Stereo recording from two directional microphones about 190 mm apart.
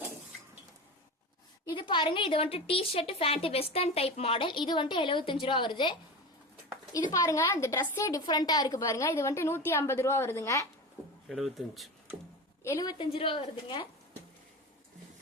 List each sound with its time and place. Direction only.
1.7 s a woman's voice: 25° left (ahead or behind)
7.1 s a woman's voice: 15° left (ahead or behind)
11.3 s speech: centre (ahead or behind)
12.6 s a woman's voice: 20° left (ahead or behind)